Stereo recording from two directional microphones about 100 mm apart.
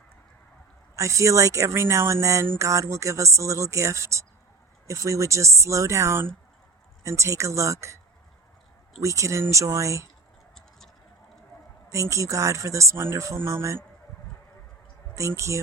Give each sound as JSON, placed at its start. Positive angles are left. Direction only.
{"t": 0.9, "sound": "speech", "side_deg": -30}
{"t": 9.0, "sound": "speech", "side_deg": -30}
{"t": 11.9, "sound": "speech", "side_deg": -30}
{"t": 15.1, "sound": "speech", "side_deg": -30}